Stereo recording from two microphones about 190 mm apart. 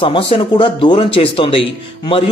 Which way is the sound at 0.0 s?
25° left (ahead or behind).